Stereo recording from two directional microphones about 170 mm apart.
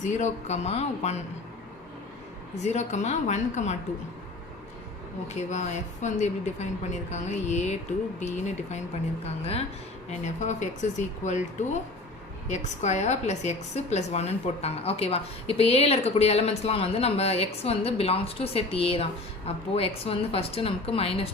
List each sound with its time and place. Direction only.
0.0 s a woman's voice: 45° left (ahead or behind)
2.6 s speech: 45° left (ahead or behind)
5.3 s a woman's voice: 45° left (ahead or behind)